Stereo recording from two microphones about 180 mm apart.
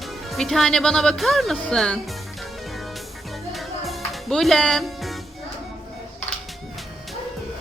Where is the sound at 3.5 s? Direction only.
Centre (ahead or behind).